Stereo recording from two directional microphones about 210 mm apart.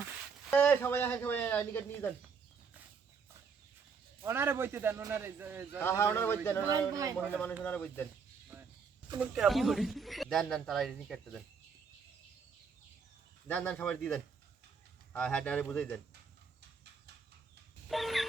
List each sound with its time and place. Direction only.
0.5 s speech: 10° left (ahead or behind)
4.2 s a man's voice: 10° right (ahead or behind)
5.8 s speech: 10° left (ahead or behind)
6.7 s a man's voice: 15° right (ahead or behind)
7.6 s speech: 10° left (ahead or behind)
8.5 s a sound: 10° right (ahead or behind)
9.1 s speech: 5° right (ahead or behind)
13.5 s speech: 10° left (ahead or behind)
17.8 s a sound: centre (ahead or behind)